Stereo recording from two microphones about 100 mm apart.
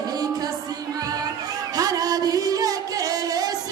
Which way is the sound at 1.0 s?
40° right (ahead or behind).